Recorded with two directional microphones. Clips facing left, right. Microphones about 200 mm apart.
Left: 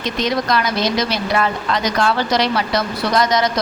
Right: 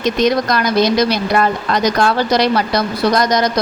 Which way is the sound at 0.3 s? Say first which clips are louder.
Right 3 dB; 45° right (ahead or behind).